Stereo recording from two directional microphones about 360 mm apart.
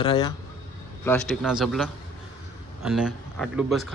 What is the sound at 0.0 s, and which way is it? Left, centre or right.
A man's voice, centre.